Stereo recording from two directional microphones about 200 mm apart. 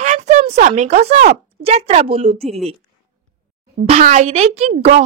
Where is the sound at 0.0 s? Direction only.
35° right (ahead or behind).